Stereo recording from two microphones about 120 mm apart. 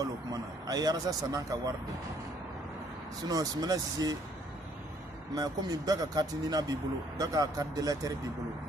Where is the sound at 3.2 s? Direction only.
30° right (ahead or behind).